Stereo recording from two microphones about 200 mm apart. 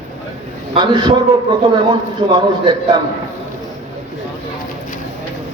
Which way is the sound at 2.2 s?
25° right (ahead or behind).